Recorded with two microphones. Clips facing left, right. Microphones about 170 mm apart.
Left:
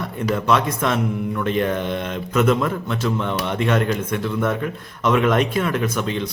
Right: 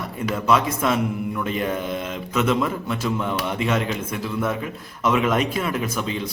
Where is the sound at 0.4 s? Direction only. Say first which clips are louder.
Right 1 dB; 5° right (ahead or behind).